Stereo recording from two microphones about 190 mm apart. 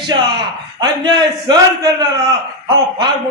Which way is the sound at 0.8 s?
20° right (ahead or behind).